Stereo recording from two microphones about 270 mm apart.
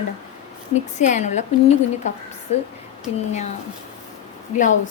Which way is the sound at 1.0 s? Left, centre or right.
Left.